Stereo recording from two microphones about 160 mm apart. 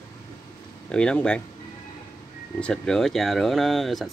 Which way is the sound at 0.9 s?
5° left (ahead or behind).